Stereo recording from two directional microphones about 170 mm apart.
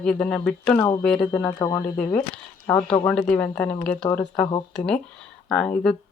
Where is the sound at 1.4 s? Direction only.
15° left (ahead or behind).